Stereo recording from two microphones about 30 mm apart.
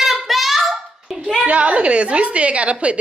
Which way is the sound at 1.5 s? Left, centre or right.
Right.